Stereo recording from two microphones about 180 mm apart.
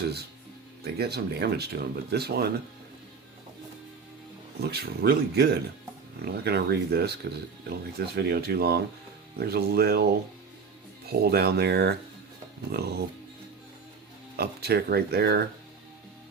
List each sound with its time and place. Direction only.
0.9 s speech: 60° right (ahead or behind)
4.6 s speech: 65° right (ahead or behind)
14.3 s speech: 60° right (ahead or behind)